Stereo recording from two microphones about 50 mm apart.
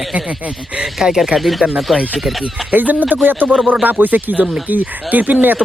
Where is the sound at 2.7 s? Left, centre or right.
Right.